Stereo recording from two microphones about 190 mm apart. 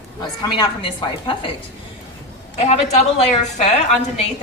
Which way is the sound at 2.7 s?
35° left (ahead or behind).